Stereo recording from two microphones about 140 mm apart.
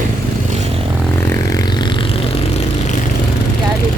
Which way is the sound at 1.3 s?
25° left (ahead or behind).